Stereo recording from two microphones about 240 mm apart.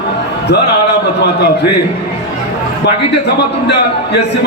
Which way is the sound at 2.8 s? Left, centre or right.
Left.